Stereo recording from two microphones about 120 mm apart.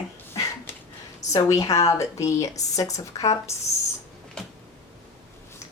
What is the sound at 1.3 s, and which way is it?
Speech, 30° left (ahead or behind).